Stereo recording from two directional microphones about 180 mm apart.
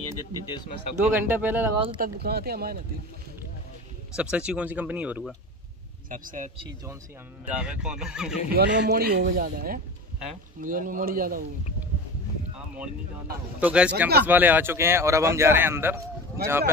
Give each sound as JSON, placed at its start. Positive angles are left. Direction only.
{"t": 0.5, "sound": "speech", "side_deg": 25}
{"t": 1.1, "sound": "a man's voice", "side_deg": -10}
{"t": 2.0, "sound": "speech", "side_deg": -60}
{"t": 4.1, "sound": "a man's voice", "side_deg": -5}
{"t": 6.0, "sound": "speech", "side_deg": -50}
{"t": 7.4, "sound": "speech", "side_deg": -5}
{"t": 8.5, "sound": "speech", "side_deg": -60}
{"t": 12.5, "sound": "boat", "side_deg": -5}
{"t": 13.6, "sound": "a man's voice", "side_deg": -10}